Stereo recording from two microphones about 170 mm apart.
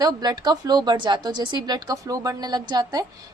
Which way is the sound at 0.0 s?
25° right (ahead or behind).